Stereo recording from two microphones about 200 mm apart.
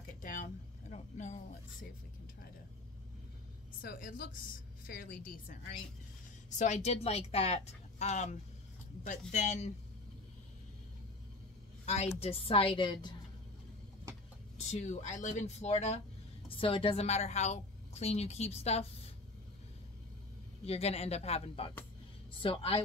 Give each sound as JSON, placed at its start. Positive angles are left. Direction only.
{"t": 0.2, "sound": "a sound", "side_deg": 40}
{"t": 3.8, "sound": "a woman's voice", "side_deg": 45}
{"t": 11.8, "sound": "a woman's voice", "side_deg": 30}
{"t": 14.6, "sound": "a woman's voice", "side_deg": 35}
{"t": 20.6, "sound": "a woman's voice", "side_deg": 30}